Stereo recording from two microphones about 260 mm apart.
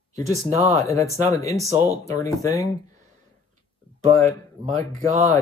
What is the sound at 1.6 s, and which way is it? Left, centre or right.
Speech, centre.